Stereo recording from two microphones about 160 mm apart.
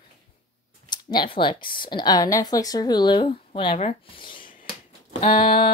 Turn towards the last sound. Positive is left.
turn(degrees=55)  # may be behind; listen again after turning